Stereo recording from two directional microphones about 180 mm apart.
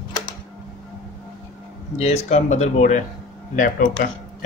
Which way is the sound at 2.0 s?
35° left (ahead or behind).